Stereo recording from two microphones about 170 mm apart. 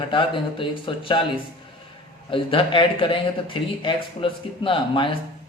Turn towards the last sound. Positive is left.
turn(degrees=30)  # may be behind; listen again after turning